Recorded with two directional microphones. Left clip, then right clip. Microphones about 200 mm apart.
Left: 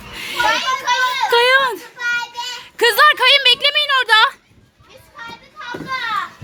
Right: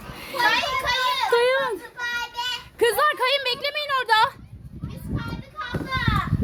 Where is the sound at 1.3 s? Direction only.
Centre (ahead or behind).